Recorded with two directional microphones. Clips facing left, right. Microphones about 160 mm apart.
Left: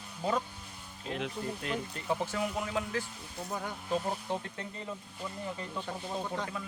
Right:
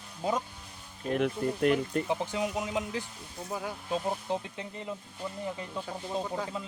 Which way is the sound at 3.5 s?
5° right (ahead or behind).